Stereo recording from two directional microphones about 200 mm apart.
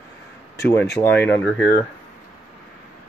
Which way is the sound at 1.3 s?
10° left (ahead or behind).